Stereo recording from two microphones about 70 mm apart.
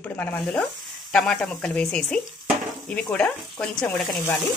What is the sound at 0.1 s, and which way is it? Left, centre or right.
Speech, left.